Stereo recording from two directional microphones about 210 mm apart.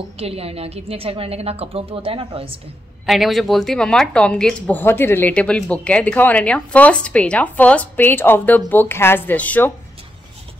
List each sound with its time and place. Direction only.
0.2 s a woman's voice: 30° right (ahead or behind)
3.1 s speech: centre (ahead or behind)